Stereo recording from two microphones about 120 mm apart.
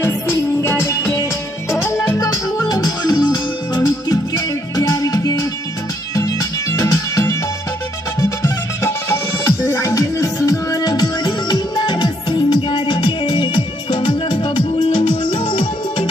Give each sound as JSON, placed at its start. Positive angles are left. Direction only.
{"t": 0.0, "sound": "music", "side_deg": 20}